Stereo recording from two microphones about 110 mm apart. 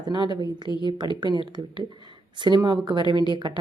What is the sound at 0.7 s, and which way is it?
Speech, 40° left (ahead or behind).